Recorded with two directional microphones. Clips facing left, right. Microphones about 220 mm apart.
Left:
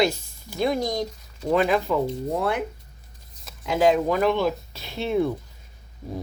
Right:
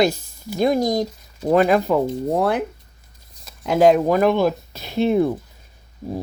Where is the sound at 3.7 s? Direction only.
45° right (ahead or behind).